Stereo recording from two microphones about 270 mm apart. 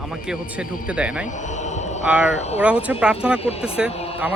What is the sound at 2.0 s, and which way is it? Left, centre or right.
Speech, centre.